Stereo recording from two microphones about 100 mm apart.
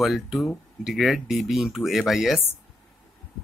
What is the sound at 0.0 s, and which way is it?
Speech, 5° right (ahead or behind).